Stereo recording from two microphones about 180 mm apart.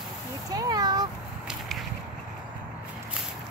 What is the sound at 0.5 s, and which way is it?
Cat, 20° right (ahead or behind).